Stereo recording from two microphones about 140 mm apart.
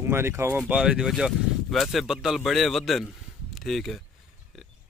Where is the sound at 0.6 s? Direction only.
5° right (ahead or behind).